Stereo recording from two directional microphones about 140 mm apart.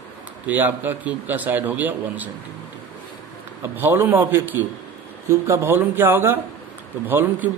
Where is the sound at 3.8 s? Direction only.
15° right (ahead or behind).